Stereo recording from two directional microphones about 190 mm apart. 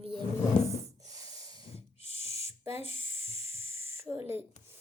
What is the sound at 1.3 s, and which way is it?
Snort, 20° right (ahead or behind).